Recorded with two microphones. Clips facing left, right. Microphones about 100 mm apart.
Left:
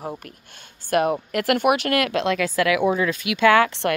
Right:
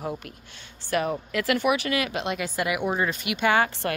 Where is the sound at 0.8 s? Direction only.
55° left (ahead or behind).